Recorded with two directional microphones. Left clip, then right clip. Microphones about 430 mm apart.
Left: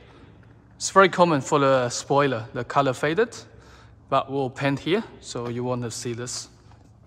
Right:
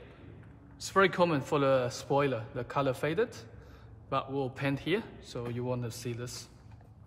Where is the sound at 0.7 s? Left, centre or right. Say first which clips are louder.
Left 9 dB; centre.